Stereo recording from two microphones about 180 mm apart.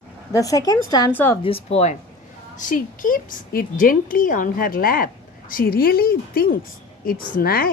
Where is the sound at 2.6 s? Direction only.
45° left (ahead or behind).